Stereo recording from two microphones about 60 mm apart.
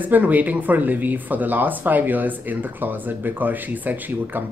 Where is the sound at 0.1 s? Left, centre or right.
Right.